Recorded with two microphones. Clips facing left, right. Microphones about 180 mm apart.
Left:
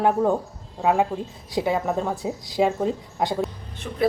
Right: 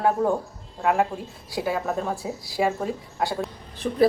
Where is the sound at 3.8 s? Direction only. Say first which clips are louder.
Right 7 dB; 35° right (ahead or behind).